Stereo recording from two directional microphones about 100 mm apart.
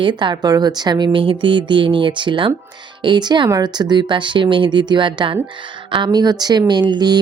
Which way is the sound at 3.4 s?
35° right (ahead or behind).